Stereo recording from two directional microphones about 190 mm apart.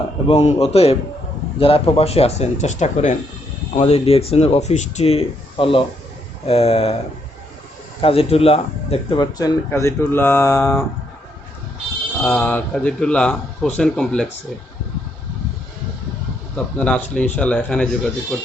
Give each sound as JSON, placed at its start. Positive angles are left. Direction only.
{"t": 0.3, "sound": "speech", "side_deg": 35}
{"t": 8.0, "sound": "speech", "side_deg": 30}
{"t": 12.2, "sound": "speech", "side_deg": 10}
{"t": 16.7, "sound": "speech", "side_deg": 5}